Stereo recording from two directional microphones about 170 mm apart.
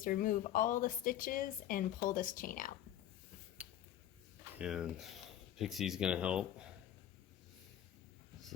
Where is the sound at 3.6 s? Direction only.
10° right (ahead or behind).